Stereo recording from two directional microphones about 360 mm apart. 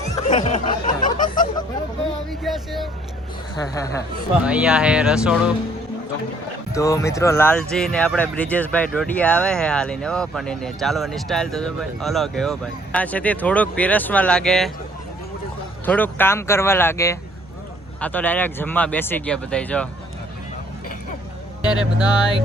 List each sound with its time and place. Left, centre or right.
0.3 s a sound: centre
2.3 s speech: centre
4.4 s speech: centre
6.7 s speech: centre
15.9 s speech: centre
21.6 s speech: centre